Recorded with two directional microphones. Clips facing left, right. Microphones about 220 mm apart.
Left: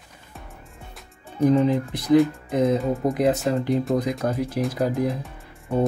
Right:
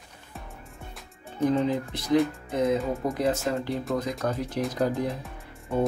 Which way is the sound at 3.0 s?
15° left (ahead or behind).